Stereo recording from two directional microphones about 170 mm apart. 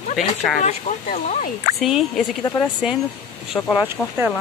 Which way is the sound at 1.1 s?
55° left (ahead or behind).